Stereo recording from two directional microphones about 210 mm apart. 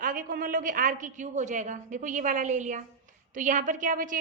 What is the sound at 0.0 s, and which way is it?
A woman's voice, 40° right (ahead or behind).